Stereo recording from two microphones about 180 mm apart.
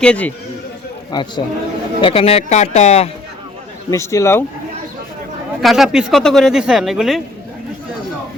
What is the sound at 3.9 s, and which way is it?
Speech, 15° left (ahead or behind).